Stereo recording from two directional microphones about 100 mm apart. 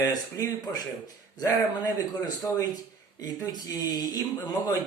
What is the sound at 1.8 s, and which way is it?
A man's voice, 45° left (ahead or behind).